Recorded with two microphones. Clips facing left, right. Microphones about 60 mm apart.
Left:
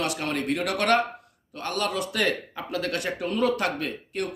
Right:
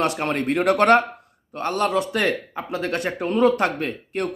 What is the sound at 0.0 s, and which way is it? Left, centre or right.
Speech, right.